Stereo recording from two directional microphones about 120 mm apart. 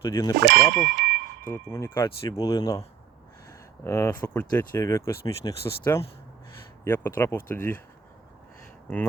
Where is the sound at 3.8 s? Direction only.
25° left (ahead or behind).